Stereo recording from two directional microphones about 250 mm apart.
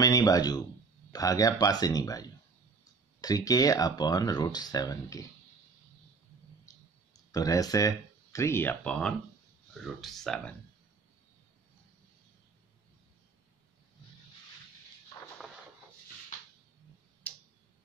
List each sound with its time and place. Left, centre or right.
0.0 s speech: centre
7.3 s speech: centre
17.3 s tick-tock: centre